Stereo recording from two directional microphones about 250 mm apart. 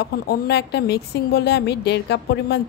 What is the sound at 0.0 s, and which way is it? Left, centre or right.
A woman's voice, left.